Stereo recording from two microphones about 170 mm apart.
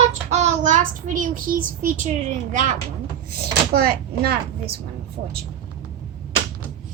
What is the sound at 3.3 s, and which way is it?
Speech, 65° right (ahead or behind).